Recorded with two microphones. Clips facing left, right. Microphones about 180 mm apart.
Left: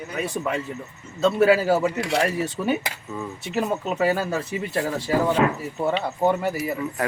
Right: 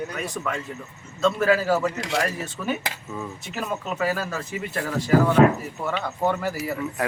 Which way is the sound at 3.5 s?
30° left (ahead or behind).